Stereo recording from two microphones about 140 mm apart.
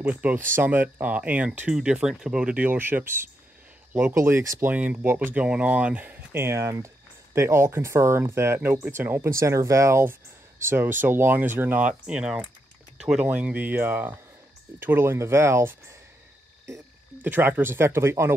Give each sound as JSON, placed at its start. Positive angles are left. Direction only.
{"t": 0.0, "sound": "speech", "side_deg": -10}